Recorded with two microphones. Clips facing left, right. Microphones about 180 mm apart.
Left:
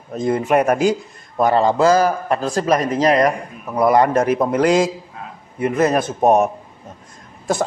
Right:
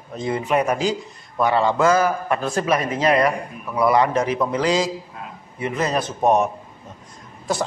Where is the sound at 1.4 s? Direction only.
40° left (ahead or behind).